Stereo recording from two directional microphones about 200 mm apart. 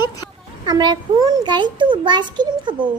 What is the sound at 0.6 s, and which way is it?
A child's voice, 20° right (ahead or behind).